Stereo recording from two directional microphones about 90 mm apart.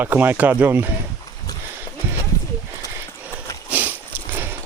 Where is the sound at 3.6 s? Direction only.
20° right (ahead or behind).